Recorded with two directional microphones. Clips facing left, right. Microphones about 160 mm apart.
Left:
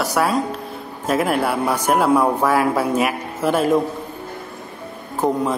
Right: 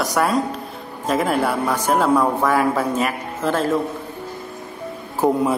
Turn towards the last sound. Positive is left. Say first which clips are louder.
# right 2 dB
turn(degrees=-10)  # may be behind; listen again after turning